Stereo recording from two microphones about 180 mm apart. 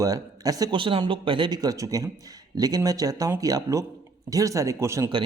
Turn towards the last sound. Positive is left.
turn(degrees=-15)  # may be behind; listen again after turning